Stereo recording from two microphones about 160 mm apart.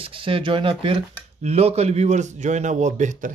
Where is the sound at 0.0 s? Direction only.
35° right (ahead or behind).